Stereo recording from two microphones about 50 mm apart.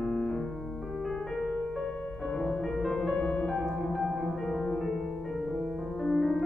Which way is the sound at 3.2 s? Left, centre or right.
Left.